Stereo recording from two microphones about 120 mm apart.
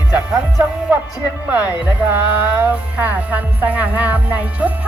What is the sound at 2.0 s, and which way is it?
Music, 15° right (ahead or behind).